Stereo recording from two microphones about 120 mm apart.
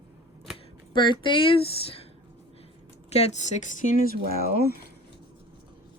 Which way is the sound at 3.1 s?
75° left (ahead or behind).